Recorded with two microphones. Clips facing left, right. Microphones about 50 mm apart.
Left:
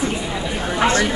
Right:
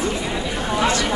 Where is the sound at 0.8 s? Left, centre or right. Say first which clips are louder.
Left 4 dB; left.